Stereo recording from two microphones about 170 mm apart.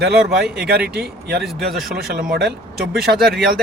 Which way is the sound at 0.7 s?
65° right (ahead or behind).